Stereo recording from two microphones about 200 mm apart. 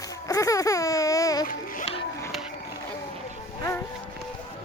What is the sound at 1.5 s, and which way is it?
Music, 45° left (ahead or behind).